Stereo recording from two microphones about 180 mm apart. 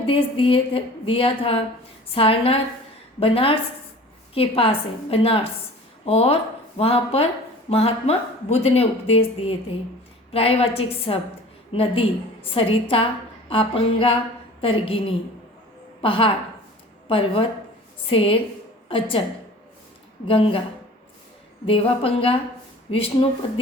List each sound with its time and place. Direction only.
0.1 s a woman's voice: 30° left (ahead or behind)
20.2 s speech: 30° left (ahead or behind)
21.7 s speech: 30° left (ahead or behind)